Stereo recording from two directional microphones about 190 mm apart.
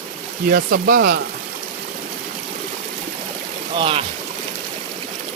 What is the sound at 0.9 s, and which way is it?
Speech, 50° right (ahead or behind).